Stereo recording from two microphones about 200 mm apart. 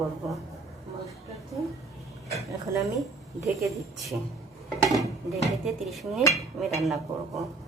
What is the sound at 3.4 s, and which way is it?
Speech, 15° right (ahead or behind).